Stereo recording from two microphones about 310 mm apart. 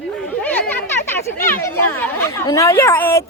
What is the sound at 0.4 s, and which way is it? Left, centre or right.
A woman's voice, centre.